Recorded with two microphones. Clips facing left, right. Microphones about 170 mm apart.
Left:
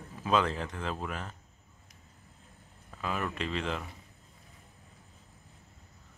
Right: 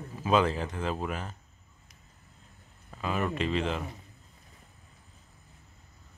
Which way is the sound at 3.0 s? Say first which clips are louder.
Right 4 dB; centre (ahead or behind).